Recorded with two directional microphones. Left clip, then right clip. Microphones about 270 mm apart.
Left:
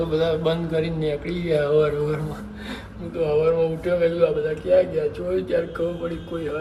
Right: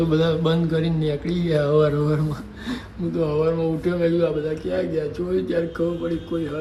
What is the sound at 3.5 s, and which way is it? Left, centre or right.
A man's voice, centre.